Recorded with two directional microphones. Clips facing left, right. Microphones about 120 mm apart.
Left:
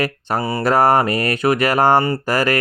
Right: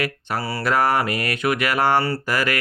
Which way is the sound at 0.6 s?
40° left (ahead or behind).